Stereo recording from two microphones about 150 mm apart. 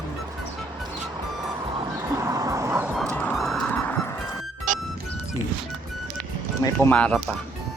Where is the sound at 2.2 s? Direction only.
25° right (ahead or behind).